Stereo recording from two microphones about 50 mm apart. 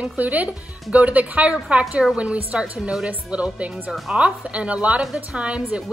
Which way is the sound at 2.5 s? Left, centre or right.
Right.